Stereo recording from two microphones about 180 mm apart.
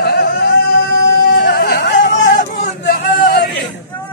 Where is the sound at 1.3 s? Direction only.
65° left (ahead or behind).